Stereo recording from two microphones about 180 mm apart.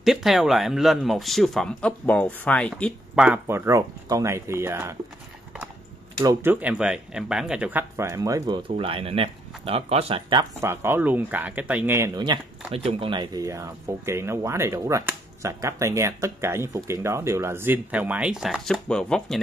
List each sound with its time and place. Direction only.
0.0 s speech: centre (ahead or behind)
2.7 s speech: 5° right (ahead or behind)
6.2 s speech: 10° right (ahead or behind)
8.6 s speech: 30° right (ahead or behind)
10.6 s speech: 15° right (ahead or behind)
12.2 s speech: 30° right (ahead or behind); by 19.3 s 5° left (ahead or behind)